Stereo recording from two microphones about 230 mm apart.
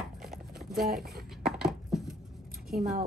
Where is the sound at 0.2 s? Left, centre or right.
Centre.